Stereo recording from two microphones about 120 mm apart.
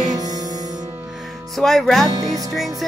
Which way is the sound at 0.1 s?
35° right (ahead or behind).